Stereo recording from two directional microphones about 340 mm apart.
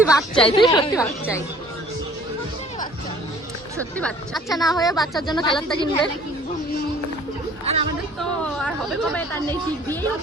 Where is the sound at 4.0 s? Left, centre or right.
Centre.